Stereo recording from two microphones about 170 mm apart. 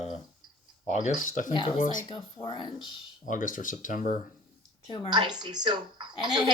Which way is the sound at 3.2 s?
50° left (ahead or behind).